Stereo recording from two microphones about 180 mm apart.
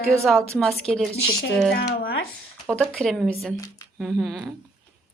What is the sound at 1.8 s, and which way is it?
Speech, 60° left (ahead or behind).